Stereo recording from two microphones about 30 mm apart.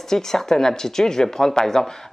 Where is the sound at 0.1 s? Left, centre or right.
Centre.